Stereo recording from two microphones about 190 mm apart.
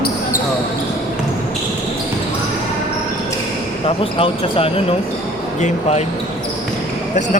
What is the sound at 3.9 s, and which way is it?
Speech, 30° left (ahead or behind).